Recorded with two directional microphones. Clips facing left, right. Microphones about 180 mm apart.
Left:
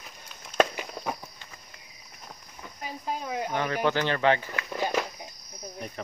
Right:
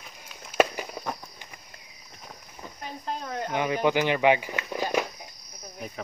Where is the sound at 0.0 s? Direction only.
5° right (ahead or behind).